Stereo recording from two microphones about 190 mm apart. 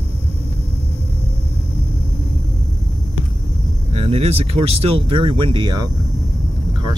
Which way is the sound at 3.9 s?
30° right (ahead or behind).